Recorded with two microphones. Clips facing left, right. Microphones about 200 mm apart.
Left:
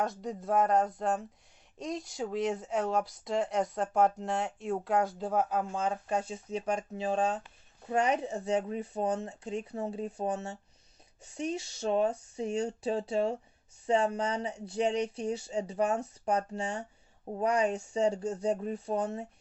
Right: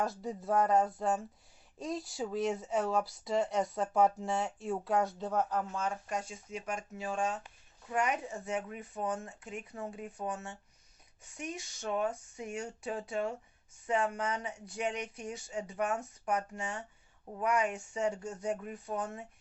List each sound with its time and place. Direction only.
0.0 s speech: 5° right (ahead or behind); by 5.9 s 15° left (ahead or behind)
5.9 s speech: 30° left (ahead or behind)